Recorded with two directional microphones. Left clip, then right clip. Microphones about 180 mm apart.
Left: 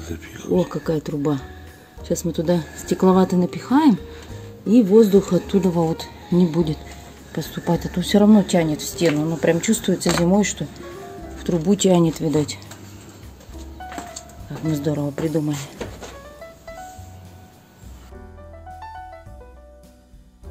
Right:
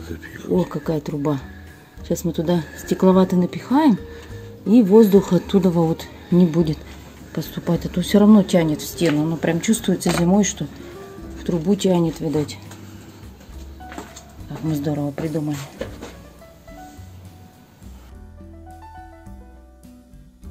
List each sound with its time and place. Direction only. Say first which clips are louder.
0.0 s speech: even; 25° left (ahead or behind)
0.8 s speech: left 1 dB; centre (ahead or behind)
4.6 s speech: right 1 dB; 15° right (ahead or behind)
7.3 s speech: left 1 dB; centre (ahead or behind)
11.3 s speech: left 1 dB; 15° left (ahead or behind)
14.7 s speech: left 1 dB; 10° left (ahead or behind)